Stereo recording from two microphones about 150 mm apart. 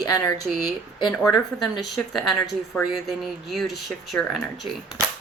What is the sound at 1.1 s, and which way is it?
Speech, centre (ahead or behind).